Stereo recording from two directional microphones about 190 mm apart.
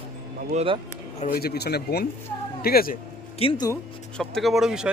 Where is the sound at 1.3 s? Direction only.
55° left (ahead or behind).